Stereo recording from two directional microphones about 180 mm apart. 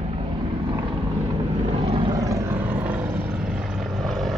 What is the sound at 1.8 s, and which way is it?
Vehicle, 30° right (ahead or behind).